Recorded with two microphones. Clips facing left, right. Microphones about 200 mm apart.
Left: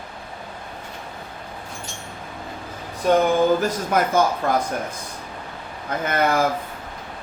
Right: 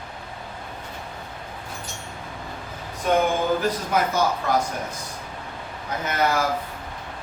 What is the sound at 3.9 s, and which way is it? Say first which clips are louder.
Speech: left 3 dB; 50° left (ahead or behind).